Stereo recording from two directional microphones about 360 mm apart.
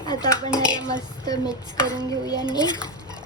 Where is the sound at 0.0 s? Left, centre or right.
Centre.